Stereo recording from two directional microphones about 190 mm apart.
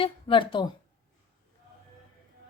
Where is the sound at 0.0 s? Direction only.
25° left (ahead or behind).